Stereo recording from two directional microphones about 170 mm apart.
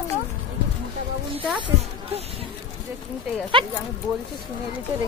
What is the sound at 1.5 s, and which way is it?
Speech, 30° right (ahead or behind).